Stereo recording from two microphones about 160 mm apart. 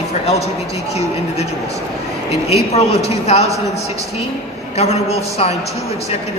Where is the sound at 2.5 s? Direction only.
40° left (ahead or behind).